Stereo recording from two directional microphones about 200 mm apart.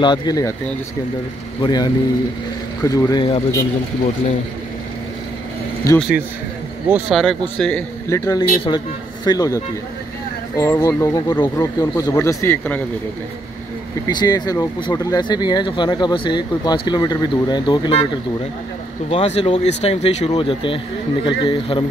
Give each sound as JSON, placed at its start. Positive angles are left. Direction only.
{"t": 0.0, "sound": "speech", "side_deg": 20}
{"t": 5.9, "sound": "speech", "side_deg": -5}
{"t": 8.3, "sound": "speech", "side_deg": 20}
{"t": 14.0, "sound": "speech", "side_deg": 20}
{"t": 19.0, "sound": "speech", "side_deg": 30}